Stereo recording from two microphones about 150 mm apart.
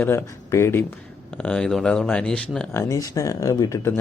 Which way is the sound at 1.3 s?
5° left (ahead or behind).